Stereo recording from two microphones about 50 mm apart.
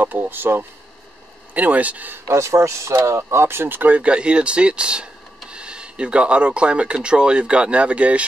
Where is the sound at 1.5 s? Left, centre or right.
Right.